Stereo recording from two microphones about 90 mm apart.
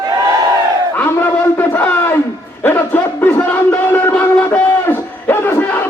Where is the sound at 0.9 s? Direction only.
25° left (ahead or behind).